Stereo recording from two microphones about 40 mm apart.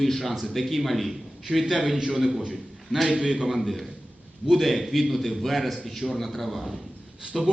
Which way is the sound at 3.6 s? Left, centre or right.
Centre.